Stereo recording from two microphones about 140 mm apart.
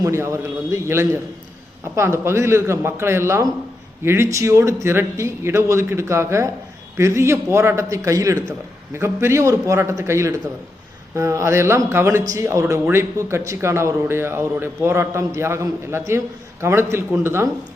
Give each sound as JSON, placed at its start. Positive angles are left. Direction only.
{"t": 0.0, "sound": "speech", "side_deg": -20}